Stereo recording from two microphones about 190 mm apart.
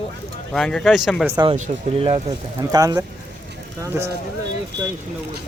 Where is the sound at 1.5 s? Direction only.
35° right (ahead or behind).